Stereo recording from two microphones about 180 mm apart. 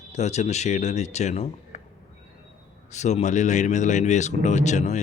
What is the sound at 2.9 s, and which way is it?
Speech, 40° left (ahead or behind).